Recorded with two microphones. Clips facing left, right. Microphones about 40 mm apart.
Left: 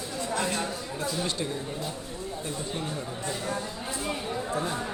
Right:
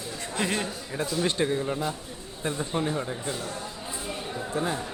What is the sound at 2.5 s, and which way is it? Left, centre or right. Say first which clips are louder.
Speech: right 7 dB; right.